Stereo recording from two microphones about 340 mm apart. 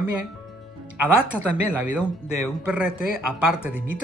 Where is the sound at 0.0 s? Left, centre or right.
Left.